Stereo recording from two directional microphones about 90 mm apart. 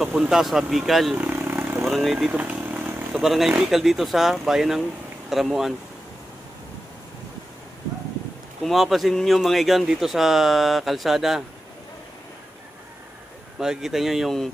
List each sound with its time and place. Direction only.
0.0 s speech: 5° right (ahead or behind)
1.1 s vehicle: 25° right (ahead or behind)
1.8 s speech: centre (ahead or behind)
2.3 s vehicle: 20° right (ahead or behind)
3.1 s speech: 5° right (ahead or behind)
8.6 s speech: centre (ahead or behind)
13.6 s speech: 5° right (ahead or behind)